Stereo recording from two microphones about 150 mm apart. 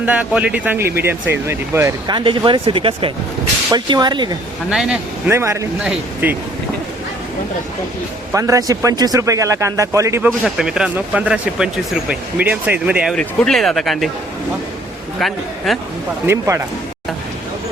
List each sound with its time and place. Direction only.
0.0 s speech: 10° right (ahead or behind)
2.0 s speech: 35° right (ahead or behind)
4.7 s a man's voice: 5° right (ahead or behind)
5.3 s speech: 20° right (ahead or behind)
5.8 s speech: 5° right (ahead or behind)
8.3 s speech: 20° right (ahead or behind)
13.1 s speech: 5° left (ahead or behind)
15.2 s speech: centre (ahead or behind)
16.2 s speech: 15° right (ahead or behind)